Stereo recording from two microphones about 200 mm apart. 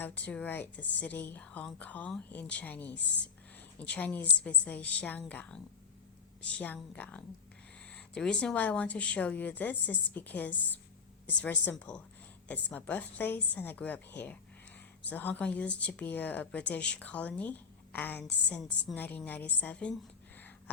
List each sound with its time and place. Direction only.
0.0 s a woman's voice: 5° left (ahead or behind)